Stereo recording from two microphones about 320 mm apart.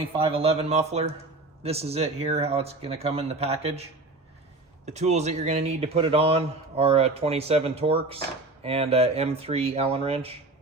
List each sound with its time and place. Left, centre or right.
0.2 s a man's voice: centre
4.9 s a man's voice: right